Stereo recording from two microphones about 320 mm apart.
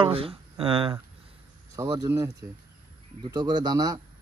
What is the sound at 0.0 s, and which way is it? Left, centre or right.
A man's voice, centre.